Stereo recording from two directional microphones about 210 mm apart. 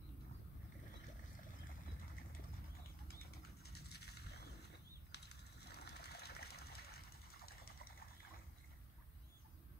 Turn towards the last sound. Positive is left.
turn(degrees=45)  # may be behind; listen again after turning